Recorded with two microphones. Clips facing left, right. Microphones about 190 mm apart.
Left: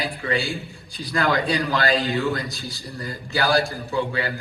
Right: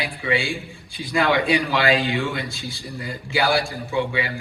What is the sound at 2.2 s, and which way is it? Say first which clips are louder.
Speech: left 2 dB; 90° right.